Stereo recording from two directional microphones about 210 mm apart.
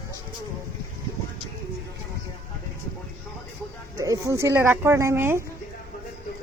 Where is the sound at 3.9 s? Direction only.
15° right (ahead or behind).